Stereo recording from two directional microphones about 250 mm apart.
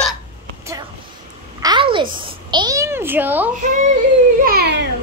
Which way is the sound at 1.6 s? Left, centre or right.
Centre.